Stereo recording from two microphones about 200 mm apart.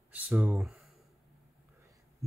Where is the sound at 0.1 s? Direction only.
5° right (ahead or behind).